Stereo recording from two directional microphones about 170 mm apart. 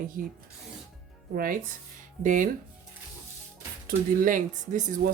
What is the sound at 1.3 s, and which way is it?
Speech, 60° right (ahead or behind).